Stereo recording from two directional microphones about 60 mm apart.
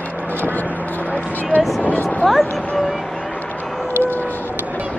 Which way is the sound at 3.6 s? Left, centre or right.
Centre.